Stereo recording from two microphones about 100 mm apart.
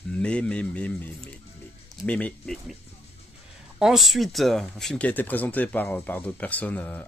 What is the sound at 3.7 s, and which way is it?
Speech, 5° right (ahead or behind).